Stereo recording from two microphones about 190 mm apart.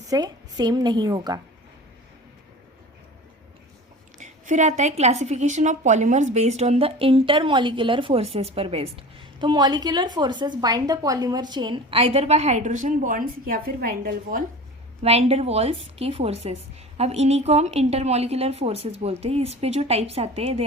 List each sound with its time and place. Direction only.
0.1 s a woman's voice: 20° right (ahead or behind)
4.2 s a woman's voice: 40° right (ahead or behind)
15.0 s a woman's voice: 30° right (ahead or behind)